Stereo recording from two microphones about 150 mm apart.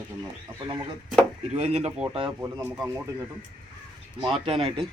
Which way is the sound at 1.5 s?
45° right (ahead or behind).